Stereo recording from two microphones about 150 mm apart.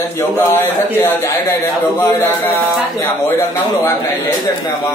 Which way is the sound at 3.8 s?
15° left (ahead or behind).